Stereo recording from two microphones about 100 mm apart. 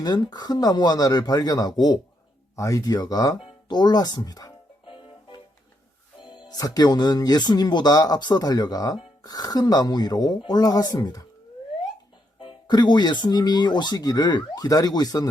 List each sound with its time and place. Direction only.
0.0 s speech: 40° left (ahead or behind)
4.9 s music: 60° left (ahead or behind)
6.5 s speech: 40° left (ahead or behind)
12.4 s speech: 50° left (ahead or behind)